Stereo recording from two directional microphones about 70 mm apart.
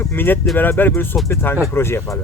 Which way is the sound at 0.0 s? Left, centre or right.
Left.